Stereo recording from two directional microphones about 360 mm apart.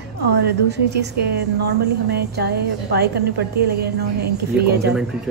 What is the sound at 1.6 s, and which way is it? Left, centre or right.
A woman's voice, right.